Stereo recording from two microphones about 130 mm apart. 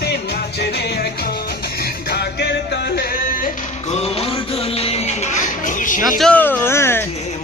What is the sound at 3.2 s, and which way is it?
Music, 90° left.